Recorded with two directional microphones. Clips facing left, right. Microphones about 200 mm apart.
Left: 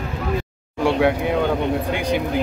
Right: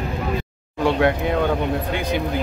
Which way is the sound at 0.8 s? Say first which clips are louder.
Left 1 dB; 10° left (ahead or behind).